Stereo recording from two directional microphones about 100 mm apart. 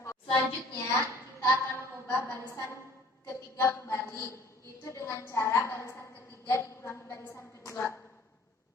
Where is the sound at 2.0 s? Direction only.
25° left (ahead or behind).